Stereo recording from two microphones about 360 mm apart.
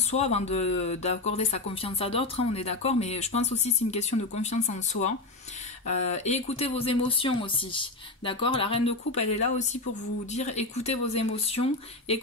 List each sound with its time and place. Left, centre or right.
0.1 s speech: centre